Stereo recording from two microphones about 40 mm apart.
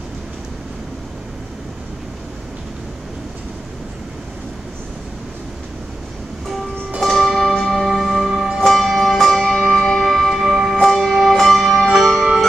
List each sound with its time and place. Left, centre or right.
7.1 s music: centre
8.5 s music: centre
9.8 s music: centre
10.0 s music: centre
10.3 s music: centre